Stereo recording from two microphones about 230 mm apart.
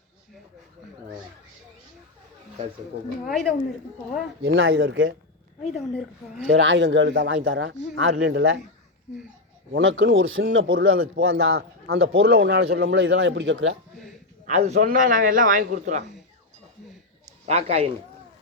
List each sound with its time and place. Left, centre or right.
3.2 s a woman's voice: centre
4.4 s speech: right
5.7 s a woman's voice: centre
6.5 s speech: right
9.7 s speech: right
14.4 s a man's voice: right
17.4 s a man's voice: right